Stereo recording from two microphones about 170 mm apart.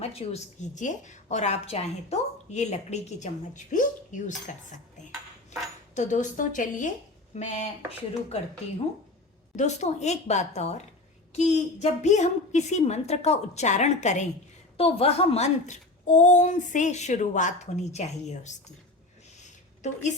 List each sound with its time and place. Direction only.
0.0 s a woman's voice: 35° left (ahead or behind)
9.6 s a woman's voice: 40° left (ahead or behind)
19.4 s a sound: 45° left (ahead or behind)